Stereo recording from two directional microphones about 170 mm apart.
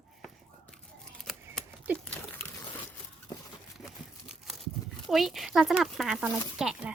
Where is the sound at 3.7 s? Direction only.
Centre (ahead or behind).